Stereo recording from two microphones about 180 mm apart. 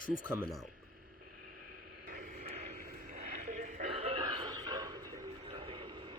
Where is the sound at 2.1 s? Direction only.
50° right (ahead or behind); by 5.0 s 20° right (ahead or behind).